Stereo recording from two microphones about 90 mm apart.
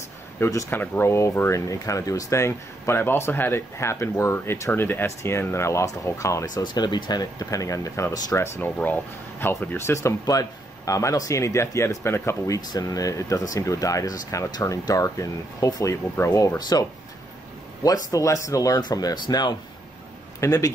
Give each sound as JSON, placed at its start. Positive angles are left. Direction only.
{"t": 0.4, "sound": "speech", "side_deg": 35}
{"t": 0.7, "sound": "speech", "side_deg": 25}
{"t": 6.5, "sound": "speech", "side_deg": 50}
{"t": 8.5, "sound": "speech", "side_deg": 20}
{"t": 12.5, "sound": "speech", "side_deg": 45}
{"t": 16.3, "sound": "speech", "side_deg": 45}
{"t": 17.8, "sound": "speech", "side_deg": 40}
{"t": 20.3, "sound": "speech", "side_deg": 40}